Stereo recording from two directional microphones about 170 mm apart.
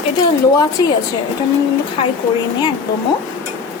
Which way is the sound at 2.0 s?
35° left (ahead or behind).